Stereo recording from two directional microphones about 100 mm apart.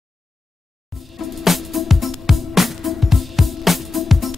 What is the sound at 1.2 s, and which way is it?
Music, centre (ahead or behind).